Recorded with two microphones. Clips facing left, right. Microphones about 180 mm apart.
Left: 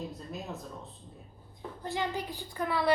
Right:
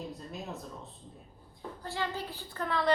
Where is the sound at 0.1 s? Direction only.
Centre (ahead or behind).